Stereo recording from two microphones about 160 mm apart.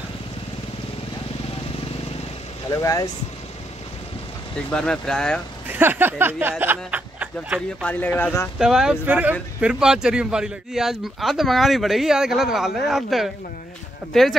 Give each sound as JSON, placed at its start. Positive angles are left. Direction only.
{"t": 2.7, "sound": "speech", "side_deg": 20}
{"t": 4.6, "sound": "speech", "side_deg": 5}
{"t": 5.7, "sound": "a sound", "side_deg": -15}
{"t": 6.6, "sound": "speech", "side_deg": -10}
{"t": 7.8, "sound": "speech", "side_deg": 10}
{"t": 8.5, "sound": "speech", "side_deg": -5}